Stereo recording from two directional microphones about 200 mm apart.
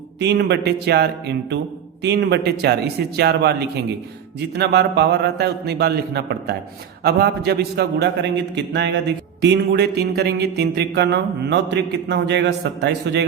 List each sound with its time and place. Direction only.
0.2 s a man's voice: 55° right (ahead or behind)